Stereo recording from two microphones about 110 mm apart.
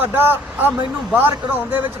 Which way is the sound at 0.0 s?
20° right (ahead or behind).